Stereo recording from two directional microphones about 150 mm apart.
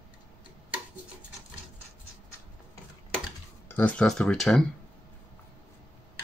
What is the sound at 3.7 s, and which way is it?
Speech, 10° left (ahead or behind).